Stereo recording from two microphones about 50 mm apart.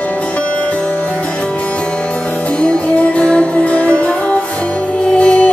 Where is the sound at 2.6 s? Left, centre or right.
Left.